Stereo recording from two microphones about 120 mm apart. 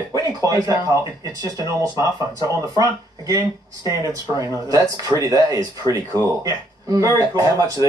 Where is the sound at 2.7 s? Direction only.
30° right (ahead or behind).